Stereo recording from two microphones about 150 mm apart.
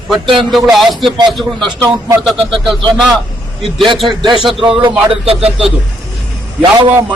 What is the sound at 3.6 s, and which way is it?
Speech, 35° right (ahead or behind).